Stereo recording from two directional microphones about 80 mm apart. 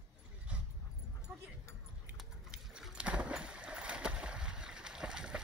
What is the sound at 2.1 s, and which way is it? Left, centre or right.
Boat, centre.